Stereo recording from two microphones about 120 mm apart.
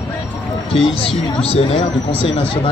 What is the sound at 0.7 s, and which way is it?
Speech, 50° left (ahead or behind).